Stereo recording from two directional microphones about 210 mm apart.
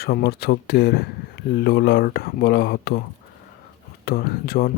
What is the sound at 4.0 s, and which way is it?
Speech, 50° left (ahead or behind).